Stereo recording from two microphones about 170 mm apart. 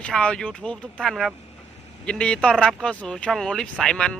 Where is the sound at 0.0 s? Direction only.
5° left (ahead or behind).